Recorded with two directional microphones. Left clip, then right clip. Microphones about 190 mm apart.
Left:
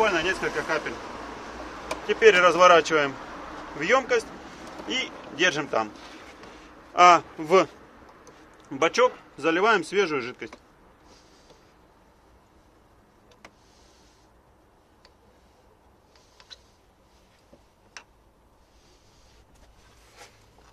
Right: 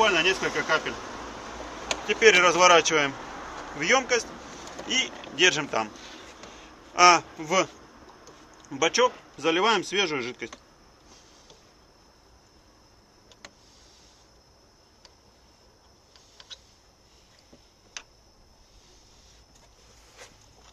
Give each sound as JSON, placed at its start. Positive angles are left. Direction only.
{"t": 0.0, "sound": "speech", "side_deg": 0}
{"t": 2.0, "sound": "speech", "side_deg": 5}
{"t": 7.0, "sound": "speech", "side_deg": 30}